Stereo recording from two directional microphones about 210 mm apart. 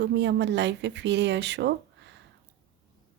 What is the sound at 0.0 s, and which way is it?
Speech, 55° right (ahead or behind).